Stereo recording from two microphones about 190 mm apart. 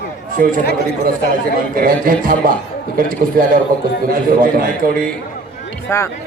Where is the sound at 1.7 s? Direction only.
45° right (ahead or behind).